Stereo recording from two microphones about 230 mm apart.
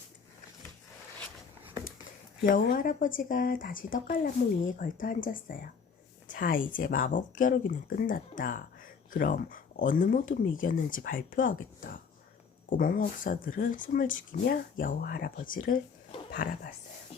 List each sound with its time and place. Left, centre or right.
2.4 s speech: left